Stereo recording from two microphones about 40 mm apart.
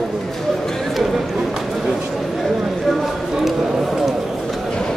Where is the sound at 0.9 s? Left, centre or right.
Centre.